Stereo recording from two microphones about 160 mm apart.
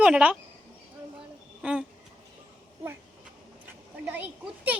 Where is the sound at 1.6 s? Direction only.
5° right (ahead or behind).